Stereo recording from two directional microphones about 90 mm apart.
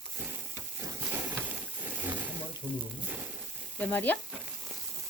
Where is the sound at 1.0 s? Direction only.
20° right (ahead or behind).